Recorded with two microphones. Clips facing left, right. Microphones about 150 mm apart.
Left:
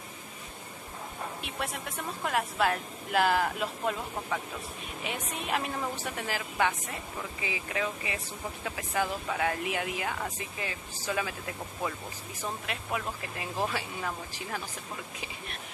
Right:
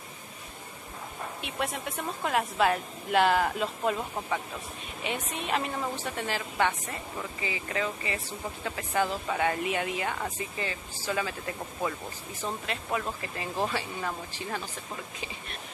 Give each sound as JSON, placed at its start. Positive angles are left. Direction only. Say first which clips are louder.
{"t": 1.4, "sound": "a woman's voice", "louder": "right 6 dB", "side_deg": 0}
{"t": 12.6, "sound": "speech", "louder": "right 3 dB", "side_deg": 5}